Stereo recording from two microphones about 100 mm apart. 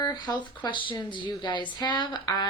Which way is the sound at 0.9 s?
55° left (ahead or behind).